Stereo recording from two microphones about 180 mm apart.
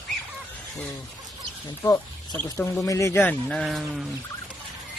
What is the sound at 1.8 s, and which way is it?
Speech, 10° left (ahead or behind).